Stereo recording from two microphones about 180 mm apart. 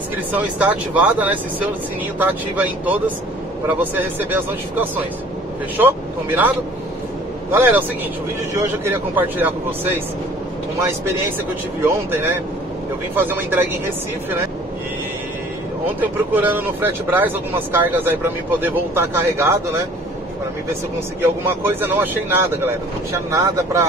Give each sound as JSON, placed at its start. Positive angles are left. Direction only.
{"t": 0.4, "sound": "speech", "side_deg": -10}
{"t": 7.5, "sound": "speech", "side_deg": -10}
{"t": 16.0, "sound": "speech", "side_deg": -10}
{"t": 21.2, "sound": "speech", "side_deg": -15}